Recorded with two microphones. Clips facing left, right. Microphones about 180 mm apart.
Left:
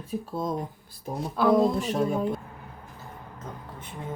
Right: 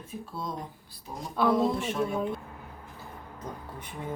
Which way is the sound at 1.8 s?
40° left (ahead or behind).